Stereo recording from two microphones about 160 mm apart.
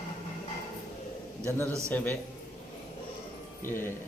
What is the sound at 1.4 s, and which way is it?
Speech, 15° left (ahead or behind).